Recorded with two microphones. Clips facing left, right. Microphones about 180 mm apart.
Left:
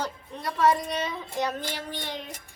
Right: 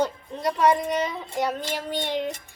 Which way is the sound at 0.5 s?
15° right (ahead or behind).